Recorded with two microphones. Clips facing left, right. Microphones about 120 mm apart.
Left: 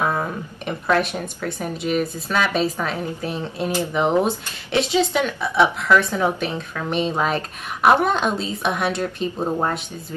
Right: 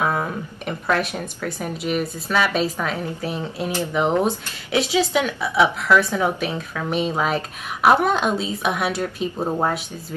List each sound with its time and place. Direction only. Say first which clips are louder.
0.0 s a woman's voice: even; 5° right (ahead or behind)